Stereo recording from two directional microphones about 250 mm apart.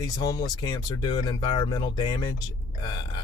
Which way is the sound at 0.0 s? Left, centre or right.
Centre.